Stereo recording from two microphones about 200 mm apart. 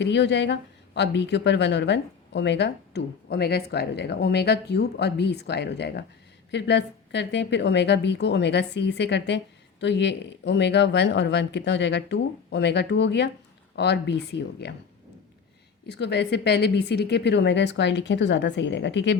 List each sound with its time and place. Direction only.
0.0 s speech: 60° left (ahead or behind)
15.9 s speech: 60° left (ahead or behind)